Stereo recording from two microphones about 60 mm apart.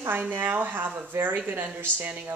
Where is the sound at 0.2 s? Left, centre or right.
Right.